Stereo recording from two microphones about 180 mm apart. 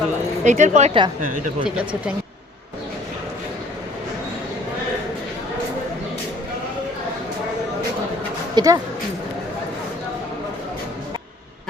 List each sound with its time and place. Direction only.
0.4 s speech: 40° right (ahead or behind)
8.5 s speech: 20° right (ahead or behind)